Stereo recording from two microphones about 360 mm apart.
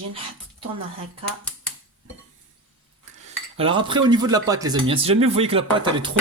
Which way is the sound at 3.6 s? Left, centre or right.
Centre.